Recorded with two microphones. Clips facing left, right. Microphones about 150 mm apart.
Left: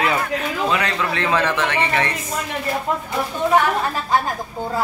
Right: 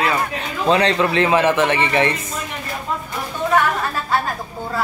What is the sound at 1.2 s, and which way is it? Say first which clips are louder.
Speech: right 3 dB; 20° right (ahead or behind).